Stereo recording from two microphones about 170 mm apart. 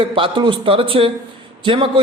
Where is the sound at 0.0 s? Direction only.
30° right (ahead or behind).